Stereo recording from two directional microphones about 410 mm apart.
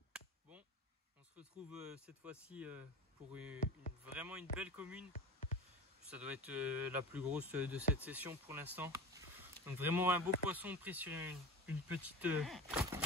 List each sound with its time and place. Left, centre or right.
0.1 s chop: centre
1.3 s speech: centre
3.5 s speech: centre
4.0 s speech: centre
5.1 s music: centre
6.0 s speech: centre